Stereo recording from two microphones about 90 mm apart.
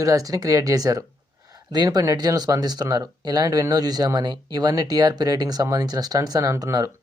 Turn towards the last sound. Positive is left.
turn(degrees=-35)  # may be behind; listen again after turning